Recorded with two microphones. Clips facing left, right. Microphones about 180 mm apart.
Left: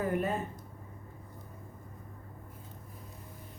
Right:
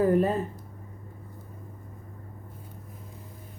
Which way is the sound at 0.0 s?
35° right (ahead or behind).